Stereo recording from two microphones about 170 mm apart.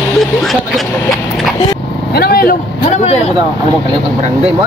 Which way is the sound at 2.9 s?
40° left (ahead or behind).